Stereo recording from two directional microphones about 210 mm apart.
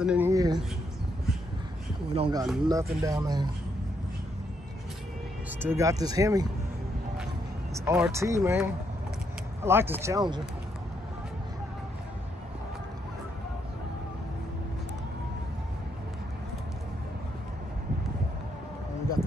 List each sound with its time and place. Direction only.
0.0 s speech: 5° right (ahead or behind)
0.3 s speech: 15° right (ahead or behind)
2.1 s speech: 25° right (ahead or behind)
2.4 s speech: centre (ahead or behind)
2.7 s speech: 15° right (ahead or behind)
5.6 s speech: 10° right (ahead or behind)
7.8 s speech: 15° right (ahead or behind)